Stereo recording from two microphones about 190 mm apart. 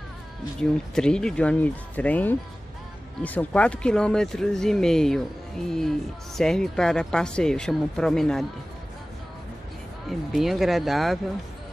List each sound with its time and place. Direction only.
0.6 s a woman's voice: 5° left (ahead or behind)
10.0 s a woman's voice: centre (ahead or behind)